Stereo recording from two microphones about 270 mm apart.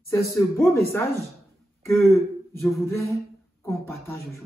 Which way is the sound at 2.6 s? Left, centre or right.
Centre.